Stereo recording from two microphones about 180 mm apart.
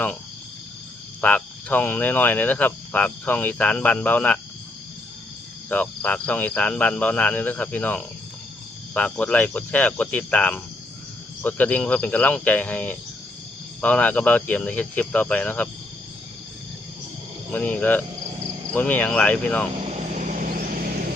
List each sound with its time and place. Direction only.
1.2 s speech: 10° left (ahead or behind)
5.6 s speech: 10° left (ahead or behind)
17.5 s speech: 10° left (ahead or behind)
19.8 s vehicle: 40° right (ahead or behind)